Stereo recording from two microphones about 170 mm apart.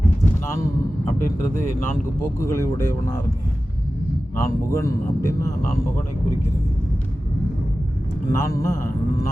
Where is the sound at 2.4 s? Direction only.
15° left (ahead or behind).